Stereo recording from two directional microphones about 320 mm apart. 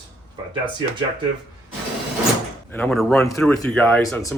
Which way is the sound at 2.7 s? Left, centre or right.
Centre.